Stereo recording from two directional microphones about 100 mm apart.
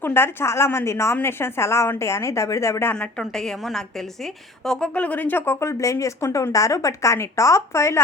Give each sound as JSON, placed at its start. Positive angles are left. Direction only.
{"t": 0.0, "sound": "speech", "side_deg": 25}
{"t": 2.9, "sound": "a woman's voice", "side_deg": 10}